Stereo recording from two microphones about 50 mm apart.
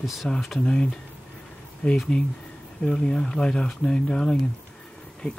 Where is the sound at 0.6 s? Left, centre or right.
Centre.